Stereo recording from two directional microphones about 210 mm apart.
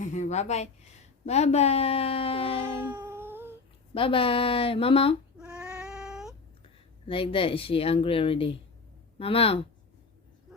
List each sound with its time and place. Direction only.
0.0 s speech: 35° left (ahead or behind)
2.8 s cat: 10° right (ahead or behind)
3.9 s speech: 25° left (ahead or behind)
5.4 s cat: 5° right (ahead or behind)
7.1 s speech: 25° left (ahead or behind)